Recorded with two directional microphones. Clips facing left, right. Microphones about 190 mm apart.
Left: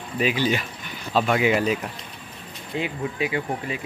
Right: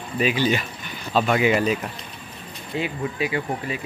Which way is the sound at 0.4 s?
10° left (ahead or behind).